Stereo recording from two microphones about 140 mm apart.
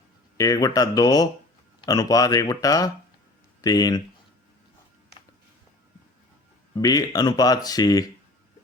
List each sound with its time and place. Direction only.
0.3 s speech: 25° left (ahead or behind)
6.7 s speech: 25° left (ahead or behind)